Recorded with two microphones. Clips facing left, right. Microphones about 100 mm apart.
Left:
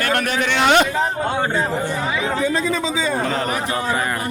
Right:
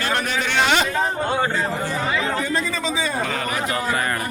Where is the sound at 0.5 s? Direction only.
60° left (ahead or behind).